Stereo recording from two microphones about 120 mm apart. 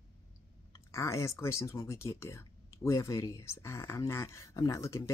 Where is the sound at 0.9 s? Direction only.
25° left (ahead or behind).